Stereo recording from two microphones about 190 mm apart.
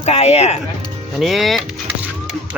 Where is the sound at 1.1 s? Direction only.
Centre (ahead or behind).